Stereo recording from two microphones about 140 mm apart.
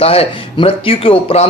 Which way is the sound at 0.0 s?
45° left (ahead or behind).